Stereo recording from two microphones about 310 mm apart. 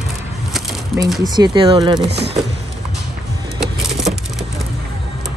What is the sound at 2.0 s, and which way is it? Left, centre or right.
Speech, right.